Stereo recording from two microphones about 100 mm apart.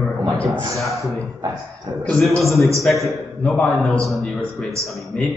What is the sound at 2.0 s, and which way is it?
Speech, 10° left (ahead or behind).